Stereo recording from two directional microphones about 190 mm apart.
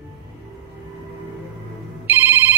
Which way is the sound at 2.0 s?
10° right (ahead or behind).